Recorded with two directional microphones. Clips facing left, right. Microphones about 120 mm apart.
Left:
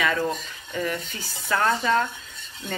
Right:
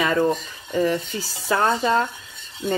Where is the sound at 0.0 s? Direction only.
30° right (ahead or behind).